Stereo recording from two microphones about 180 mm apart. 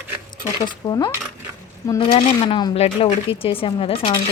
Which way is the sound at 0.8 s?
25° left (ahead or behind).